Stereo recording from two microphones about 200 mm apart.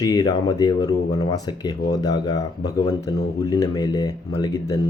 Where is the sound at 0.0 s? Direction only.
20° left (ahead or behind).